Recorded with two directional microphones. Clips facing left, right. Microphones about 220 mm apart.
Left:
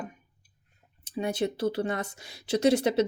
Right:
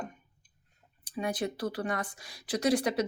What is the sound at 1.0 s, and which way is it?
Speech, 25° left (ahead or behind).